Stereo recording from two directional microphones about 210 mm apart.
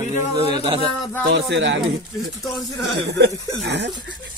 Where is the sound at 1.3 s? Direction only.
60° right (ahead or behind).